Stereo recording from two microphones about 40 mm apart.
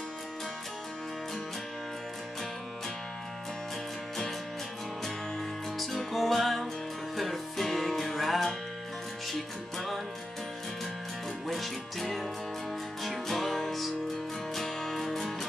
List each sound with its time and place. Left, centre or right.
5.8 s music: centre
9.8 s music: centre
11.4 s music: centre